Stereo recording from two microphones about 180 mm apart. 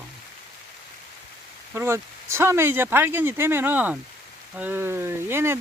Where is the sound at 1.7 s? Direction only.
15° right (ahead or behind).